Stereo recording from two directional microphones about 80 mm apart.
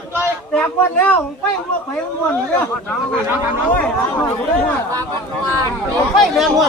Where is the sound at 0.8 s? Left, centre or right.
Left.